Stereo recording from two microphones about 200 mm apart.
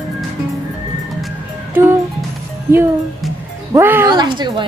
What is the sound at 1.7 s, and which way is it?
Music, 10° right (ahead or behind).